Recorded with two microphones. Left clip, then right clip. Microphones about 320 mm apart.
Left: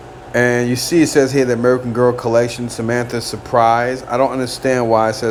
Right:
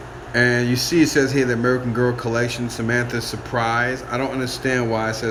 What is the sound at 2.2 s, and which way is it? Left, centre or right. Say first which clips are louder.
Speech: left 7 dB; left.